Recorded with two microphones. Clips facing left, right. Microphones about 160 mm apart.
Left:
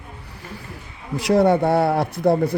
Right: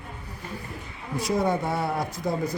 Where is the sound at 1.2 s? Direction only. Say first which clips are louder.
Left 9 dB; 70° left (ahead or behind).